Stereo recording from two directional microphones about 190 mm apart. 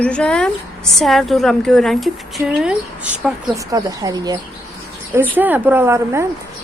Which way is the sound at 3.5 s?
20° right (ahead or behind).